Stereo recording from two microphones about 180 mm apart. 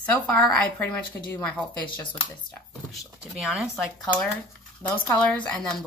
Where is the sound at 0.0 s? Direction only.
10° left (ahead or behind).